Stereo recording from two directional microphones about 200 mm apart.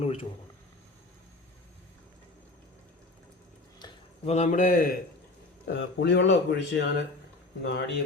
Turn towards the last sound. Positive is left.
turn(degrees=60)  # may be behind; listen again after turning